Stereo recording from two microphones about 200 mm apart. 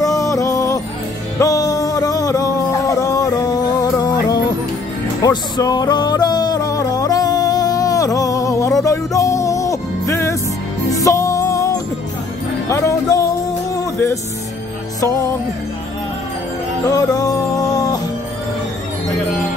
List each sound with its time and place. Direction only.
0.0 s music: 15° left (ahead or behind)
16.9 s music: 15° left (ahead or behind)